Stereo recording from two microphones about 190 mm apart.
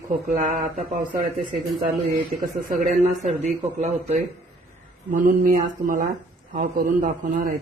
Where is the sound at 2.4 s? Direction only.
45° right (ahead or behind).